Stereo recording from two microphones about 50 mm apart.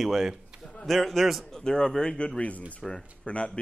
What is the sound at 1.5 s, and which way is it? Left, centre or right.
Speech, centre.